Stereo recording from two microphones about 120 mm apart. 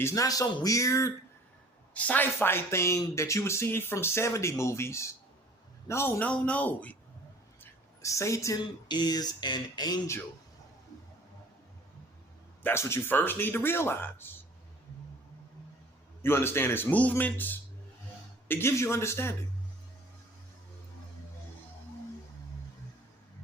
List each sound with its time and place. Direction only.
0.0 s speech: 25° left (ahead or behind)
1.9 s a man's voice: 10° left (ahead or behind)
7.6 s a sound: 25° left (ahead or behind)
8.9 s speech: 35° left (ahead or behind)
12.6 s speech: 20° left (ahead or behind)
16.2 s a man's voice: 20° left (ahead or behind)